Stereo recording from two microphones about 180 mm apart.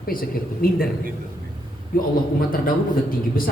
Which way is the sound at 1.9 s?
55° left (ahead or behind).